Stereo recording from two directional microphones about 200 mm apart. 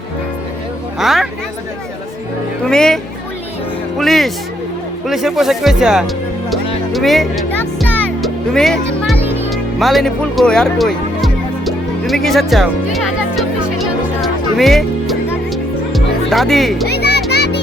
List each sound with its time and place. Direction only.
0.9 s a woman's voice: centre (ahead or behind)
2.6 s music: 5° left (ahead or behind)
5.0 s speech: centre (ahead or behind)
6.9 s music: centre (ahead or behind)
9.2 s music: 10° right (ahead or behind)
9.5 s music: centre (ahead or behind)
16.8 s music: 55° left (ahead or behind)